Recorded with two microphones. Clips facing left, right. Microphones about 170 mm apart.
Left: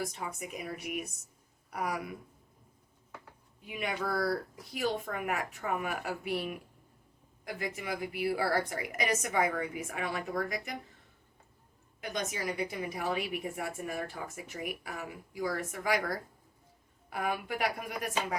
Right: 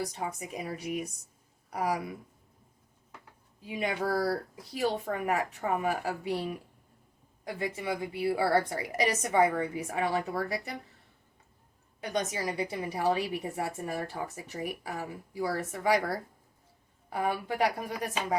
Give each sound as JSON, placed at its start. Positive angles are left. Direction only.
{"t": 0.0, "sound": "speech", "side_deg": -30}
{"t": 3.6, "sound": "speech", "side_deg": -30}
{"t": 11.9, "sound": "speech", "side_deg": -35}